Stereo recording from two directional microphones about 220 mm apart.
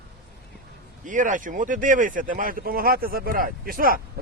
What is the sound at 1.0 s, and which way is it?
Speech, 35° right (ahead or behind).